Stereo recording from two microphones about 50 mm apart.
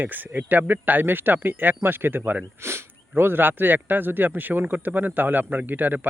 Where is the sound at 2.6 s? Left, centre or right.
Right.